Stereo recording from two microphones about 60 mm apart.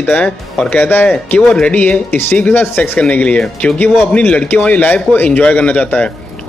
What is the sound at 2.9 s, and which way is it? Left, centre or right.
Speech, centre.